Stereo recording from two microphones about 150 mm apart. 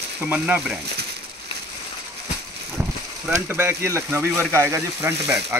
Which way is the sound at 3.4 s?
15° right (ahead or behind).